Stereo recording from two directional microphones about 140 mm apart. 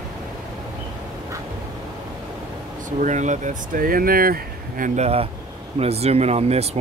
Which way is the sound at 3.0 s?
60° right (ahead or behind).